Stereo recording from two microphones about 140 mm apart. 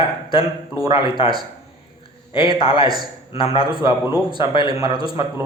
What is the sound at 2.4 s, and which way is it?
Speech, 30° right (ahead or behind).